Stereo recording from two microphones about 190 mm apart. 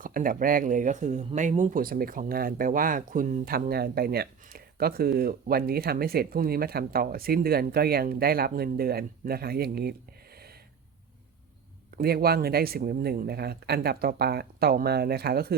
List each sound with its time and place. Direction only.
0.0 s speech: 45° right (ahead or behind)
10.3 s wheeze: 55° right (ahead or behind)
11.9 s speech: 55° right (ahead or behind)